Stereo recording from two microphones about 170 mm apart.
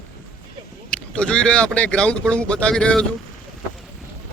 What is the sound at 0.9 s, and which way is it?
Speech, 5° left (ahead or behind).